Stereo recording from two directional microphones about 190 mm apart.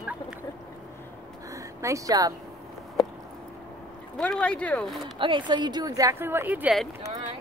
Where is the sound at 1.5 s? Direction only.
15° right (ahead or behind).